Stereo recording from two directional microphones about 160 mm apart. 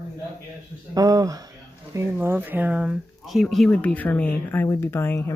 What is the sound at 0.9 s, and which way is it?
Speech, 25° right (ahead or behind).